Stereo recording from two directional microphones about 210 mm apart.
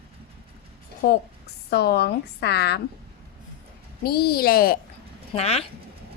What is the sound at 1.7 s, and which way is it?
A woman's voice, 50° left (ahead or behind).